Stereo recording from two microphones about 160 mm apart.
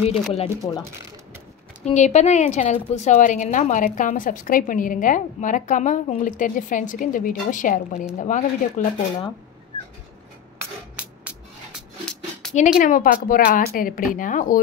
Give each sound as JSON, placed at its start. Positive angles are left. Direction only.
{"t": 0.1, "sound": "speech", "side_deg": 40}
{"t": 1.9, "sound": "a woman's voice", "side_deg": 45}
{"t": 12.1, "sound": "a sound", "side_deg": 5}
{"t": 12.7, "sound": "speech", "side_deg": 60}